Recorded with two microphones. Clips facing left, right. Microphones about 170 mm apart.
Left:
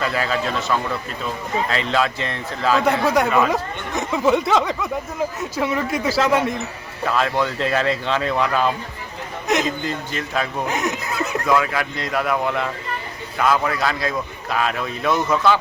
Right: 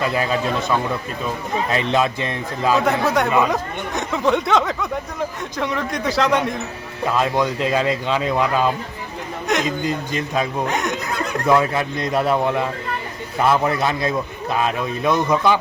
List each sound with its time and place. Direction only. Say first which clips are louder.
0.0 s speech: right 2 dB; 20° right (ahead or behind)
3.0 s speech: even; centre (ahead or behind)
7.0 s speech: right 1 dB; 20° right (ahead or behind)
9.5 s a man's voice: left 1 dB; centre (ahead or behind)
9.8 s speech: right 3 dB; 15° right (ahead or behind)
10.7 s a sound: right 1 dB; centre (ahead or behind)
11.4 s a man's voice: right 4 dB; 25° right (ahead or behind)